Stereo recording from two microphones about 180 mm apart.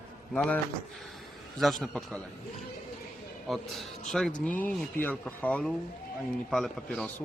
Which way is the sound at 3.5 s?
Centre (ahead or behind).